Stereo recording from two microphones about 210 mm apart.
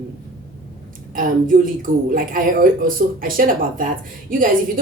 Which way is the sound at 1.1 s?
40° right (ahead or behind).